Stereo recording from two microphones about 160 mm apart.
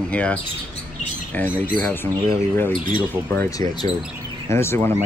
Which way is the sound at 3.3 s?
20° left (ahead or behind).